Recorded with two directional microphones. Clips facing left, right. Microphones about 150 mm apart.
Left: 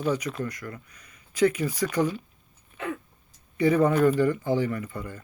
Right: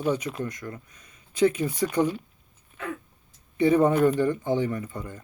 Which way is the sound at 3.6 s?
20° right (ahead or behind).